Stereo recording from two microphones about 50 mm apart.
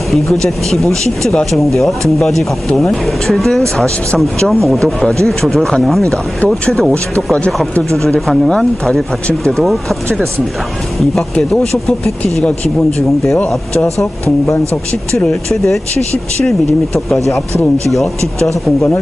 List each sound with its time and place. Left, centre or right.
0.1 s speech: centre
5.9 s speech: centre
6.4 s speech: left
8.3 s speech: centre
13.8 s speech: right